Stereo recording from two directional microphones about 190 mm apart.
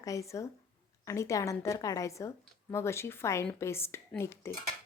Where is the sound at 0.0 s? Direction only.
15° left (ahead or behind).